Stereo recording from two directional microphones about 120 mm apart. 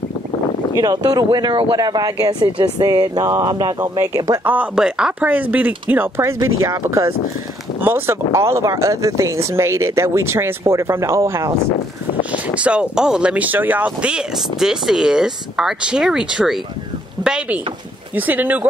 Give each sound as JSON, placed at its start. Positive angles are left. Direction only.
{"t": 0.7, "sound": "speech", "side_deg": -30}
{"t": 1.8, "sound": "speech", "side_deg": -30}
{"t": 4.5, "sound": "speech", "side_deg": -10}
{"t": 12.5, "sound": "speech", "side_deg": -10}